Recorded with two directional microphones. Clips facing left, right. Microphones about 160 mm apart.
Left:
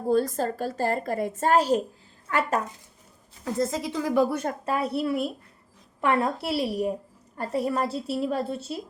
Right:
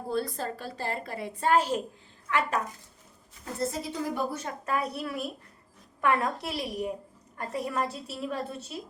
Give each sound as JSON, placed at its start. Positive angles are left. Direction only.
{"t": 0.1, "sound": "a woman's voice", "side_deg": 45}
{"t": 3.4, "sound": "a woman's voice", "side_deg": 90}
{"t": 4.6, "sound": "a woman's voice", "side_deg": 30}